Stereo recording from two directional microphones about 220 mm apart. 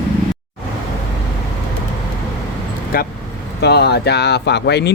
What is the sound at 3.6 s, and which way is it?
Speech, 50° left (ahead or behind).